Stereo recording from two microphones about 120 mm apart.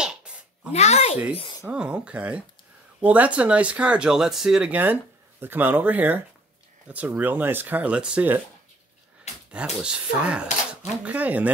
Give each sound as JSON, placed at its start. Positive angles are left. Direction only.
{"t": 0.0, "sound": "a sound", "side_deg": -5}
{"t": 0.7, "sound": "speech", "side_deg": 65}
{"t": 1.7, "sound": "speech", "side_deg": -10}
{"t": 9.5, "sound": "speech", "side_deg": -5}